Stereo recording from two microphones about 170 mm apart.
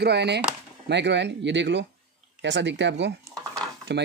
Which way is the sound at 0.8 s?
90° right.